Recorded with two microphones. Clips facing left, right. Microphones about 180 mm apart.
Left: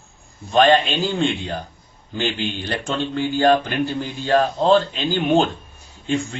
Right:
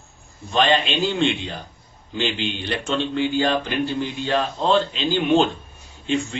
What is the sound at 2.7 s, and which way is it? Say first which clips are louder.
A man's voice: right 2 dB; 45° left (ahead or behind).